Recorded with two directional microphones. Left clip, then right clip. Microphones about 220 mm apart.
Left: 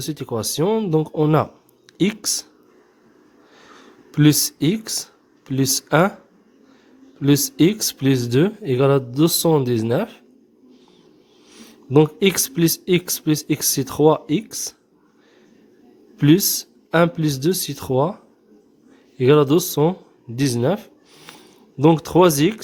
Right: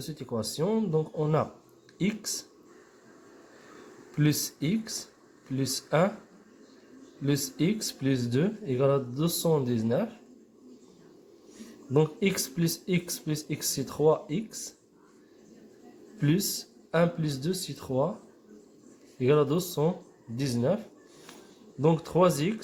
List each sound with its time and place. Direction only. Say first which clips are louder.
0.1 s speech: left 8 dB; 45° left (ahead or behind)
4.1 s speech: left 12 dB; 50° left (ahead or behind)
7.2 s speech: left 13 dB; 50° left (ahead or behind)
11.9 s speech: left 10 dB; 50° left (ahead or behind)
16.1 s speech: left 13 dB; 55° left (ahead or behind)
19.2 s speech: left 10 dB; 50° left (ahead or behind)